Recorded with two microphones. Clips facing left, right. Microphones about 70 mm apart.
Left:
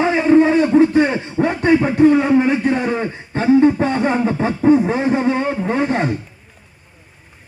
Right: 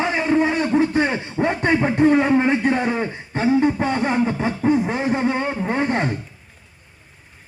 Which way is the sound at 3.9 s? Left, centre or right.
Centre.